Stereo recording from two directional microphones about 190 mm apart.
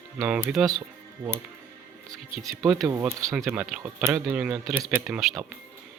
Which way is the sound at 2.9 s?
15° right (ahead or behind).